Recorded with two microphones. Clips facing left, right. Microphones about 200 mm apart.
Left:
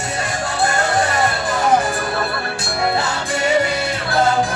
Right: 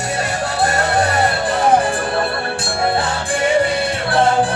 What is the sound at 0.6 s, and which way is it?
Music, 35° right (ahead or behind).